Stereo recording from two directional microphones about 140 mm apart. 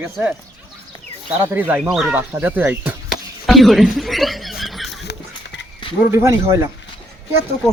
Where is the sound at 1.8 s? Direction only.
Centre (ahead or behind).